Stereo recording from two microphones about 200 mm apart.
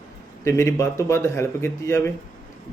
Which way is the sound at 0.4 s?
15° left (ahead or behind).